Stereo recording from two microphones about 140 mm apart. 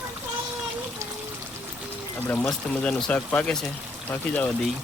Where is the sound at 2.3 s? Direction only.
5° left (ahead or behind).